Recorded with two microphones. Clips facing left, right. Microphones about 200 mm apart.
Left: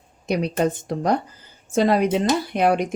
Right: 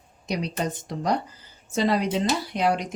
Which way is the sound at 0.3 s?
55° left (ahead or behind).